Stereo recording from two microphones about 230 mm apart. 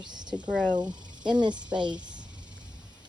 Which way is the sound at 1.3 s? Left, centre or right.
Centre.